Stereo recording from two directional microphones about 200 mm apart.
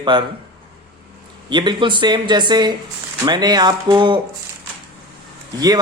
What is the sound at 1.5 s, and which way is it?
Speech, 20° right (ahead or behind).